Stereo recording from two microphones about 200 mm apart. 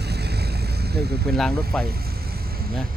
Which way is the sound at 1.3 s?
Centre (ahead or behind).